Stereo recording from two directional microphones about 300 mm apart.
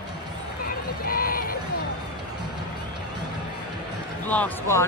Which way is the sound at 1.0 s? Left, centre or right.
Left.